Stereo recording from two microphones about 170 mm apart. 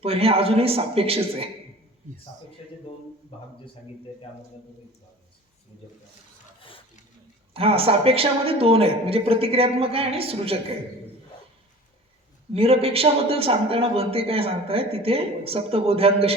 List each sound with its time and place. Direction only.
0.0 s a man's voice: 35° right (ahead or behind)
6.6 s a sound: 30° left (ahead or behind)
7.5 s a man's voice: 35° right (ahead or behind)
12.5 s a man's voice: 35° right (ahead or behind)